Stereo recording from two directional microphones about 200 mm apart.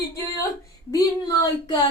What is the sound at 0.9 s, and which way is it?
Speech, 15° left (ahead or behind).